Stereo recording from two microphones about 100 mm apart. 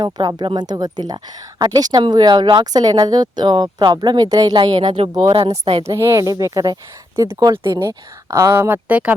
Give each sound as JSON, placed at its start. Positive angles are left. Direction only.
{"t": 0.0, "sound": "speech", "side_deg": -45}
{"t": 5.4, "sound": "speech", "side_deg": -70}
{"t": 5.8, "sound": "speech", "side_deg": -30}
{"t": 7.5, "sound": "speech", "side_deg": -60}
{"t": 7.9, "sound": "speech", "side_deg": -30}